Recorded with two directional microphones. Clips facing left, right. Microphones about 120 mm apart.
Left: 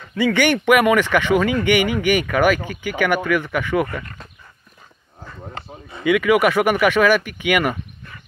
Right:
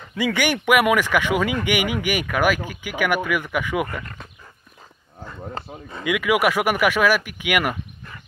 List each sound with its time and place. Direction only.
0.1 s speech: 10° right (ahead or behind)
5.5 s speech: 40° right (ahead or behind)
6.0 s speech: 5° right (ahead or behind)